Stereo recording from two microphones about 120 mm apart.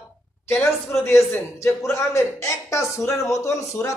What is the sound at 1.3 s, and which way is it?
A man's voice, 20° left (ahead or behind).